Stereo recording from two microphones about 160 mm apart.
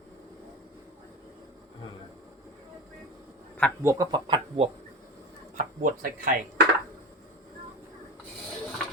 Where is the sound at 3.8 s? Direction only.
20° right (ahead or behind).